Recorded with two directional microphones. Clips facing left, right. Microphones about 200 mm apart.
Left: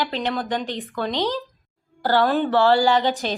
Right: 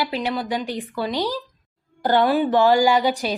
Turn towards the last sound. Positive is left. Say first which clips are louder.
# right 1 dB
turn(degrees=-10)  # may be behind; listen again after turning